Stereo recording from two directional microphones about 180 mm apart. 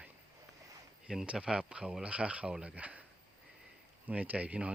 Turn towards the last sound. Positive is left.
turn(degrees=-5)  # may be behind; listen again after turning